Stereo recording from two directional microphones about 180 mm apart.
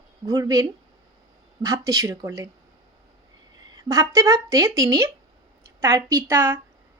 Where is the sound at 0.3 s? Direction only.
20° right (ahead or behind).